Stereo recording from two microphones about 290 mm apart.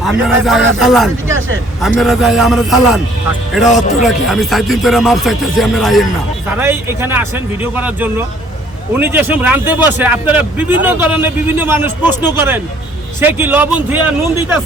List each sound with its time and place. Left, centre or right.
0.0 s speech: centre
3.7 s speech: left
4.0 s a man's voice: centre